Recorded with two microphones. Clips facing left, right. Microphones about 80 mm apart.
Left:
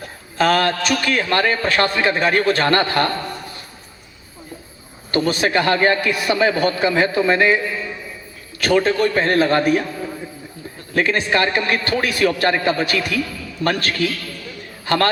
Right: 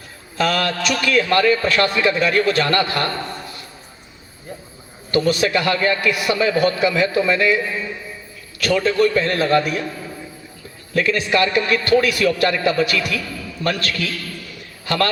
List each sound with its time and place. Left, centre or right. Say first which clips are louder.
0.0 s a man's voice: left 2 dB; left
5.1 s a man's voice: even; left
10.9 s a man's voice: even; left